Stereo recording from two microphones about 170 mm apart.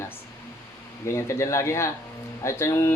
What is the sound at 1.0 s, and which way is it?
Speech, 15° left (ahead or behind).